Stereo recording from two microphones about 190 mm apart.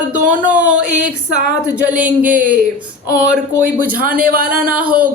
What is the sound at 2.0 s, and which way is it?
Speech, 5° right (ahead or behind).